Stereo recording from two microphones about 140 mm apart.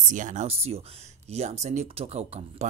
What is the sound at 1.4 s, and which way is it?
Speech, 55° right (ahead or behind).